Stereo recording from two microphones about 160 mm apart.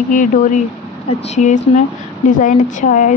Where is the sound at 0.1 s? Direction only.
55° left (ahead or behind).